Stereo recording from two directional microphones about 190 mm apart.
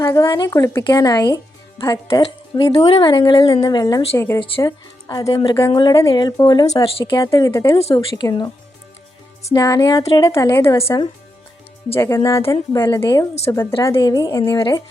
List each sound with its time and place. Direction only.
0.0 s speech: 15° left (ahead or behind)
7.2 s speech: 15° left (ahead or behind)
9.5 s speech: 15° left (ahead or behind)
13.0 s speech: 25° left (ahead or behind)
13.5 s speech: 15° left (ahead or behind)